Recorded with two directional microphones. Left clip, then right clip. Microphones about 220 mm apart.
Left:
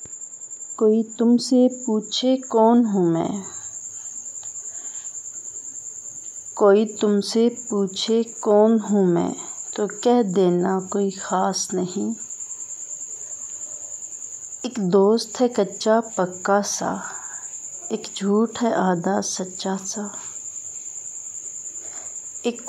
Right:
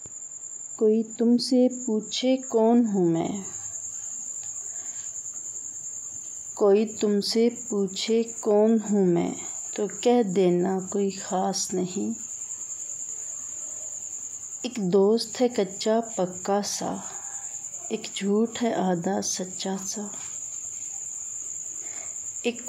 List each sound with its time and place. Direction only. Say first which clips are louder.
0.7 s speech: left 4 dB; 15° left (ahead or behind)
6.5 s speech: left 5 dB; 15° left (ahead or behind)
14.6 s speech: left 4 dB; 15° left (ahead or behind)
22.4 s speech: left 3 dB; 15° left (ahead or behind)